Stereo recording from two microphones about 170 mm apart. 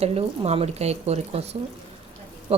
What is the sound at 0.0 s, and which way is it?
Speech, 40° right (ahead or behind).